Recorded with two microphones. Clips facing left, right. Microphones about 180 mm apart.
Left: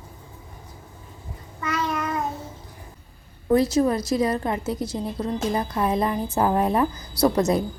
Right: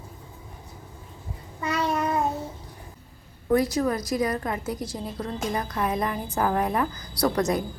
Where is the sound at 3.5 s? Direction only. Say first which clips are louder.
Left 3 dB; 25° left (ahead or behind).